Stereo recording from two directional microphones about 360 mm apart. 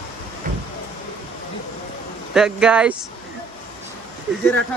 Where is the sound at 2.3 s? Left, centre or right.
Centre.